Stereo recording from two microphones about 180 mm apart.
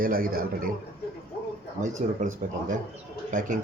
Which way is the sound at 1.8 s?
45° right (ahead or behind).